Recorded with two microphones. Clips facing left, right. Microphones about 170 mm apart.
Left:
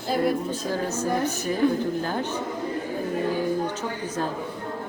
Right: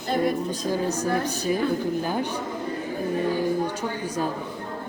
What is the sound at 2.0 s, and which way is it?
Speech, 15° right (ahead or behind).